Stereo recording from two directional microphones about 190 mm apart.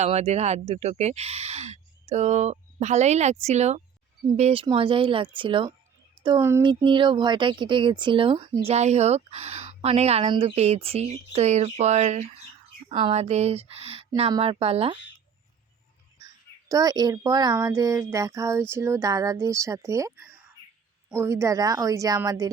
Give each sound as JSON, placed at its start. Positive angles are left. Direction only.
{"t": 0.0, "sound": "speech", "side_deg": -35}
{"t": 6.4, "sound": "a child's voice", "side_deg": -15}
{"t": 6.8, "sound": "speech", "side_deg": -25}
{"t": 16.2, "sound": "a child's voice", "side_deg": -20}